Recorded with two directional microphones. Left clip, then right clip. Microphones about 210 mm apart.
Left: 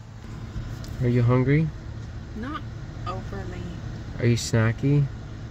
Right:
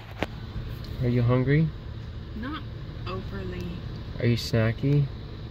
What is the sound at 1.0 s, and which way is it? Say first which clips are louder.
Speech: left 2 dB; 30° left (ahead or behind).